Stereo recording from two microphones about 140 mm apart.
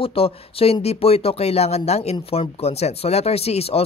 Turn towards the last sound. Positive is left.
turn(degrees=45)  # may be behind; listen again after turning